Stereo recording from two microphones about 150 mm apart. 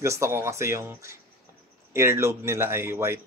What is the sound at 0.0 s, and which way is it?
A man's voice, 20° right (ahead or behind).